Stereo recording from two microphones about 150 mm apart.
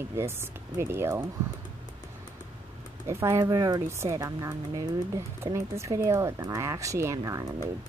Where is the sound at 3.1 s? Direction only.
20° right (ahead or behind).